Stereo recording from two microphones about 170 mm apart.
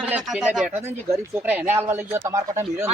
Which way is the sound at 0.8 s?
15° right (ahead or behind).